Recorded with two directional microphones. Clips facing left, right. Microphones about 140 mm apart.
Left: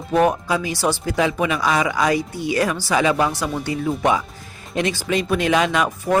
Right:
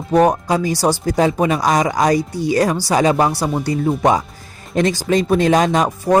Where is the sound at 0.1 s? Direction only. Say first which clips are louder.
Right 4 dB; 40° right (ahead or behind).